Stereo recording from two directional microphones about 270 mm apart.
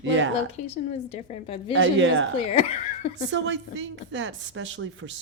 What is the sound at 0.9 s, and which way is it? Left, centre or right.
Speech, left.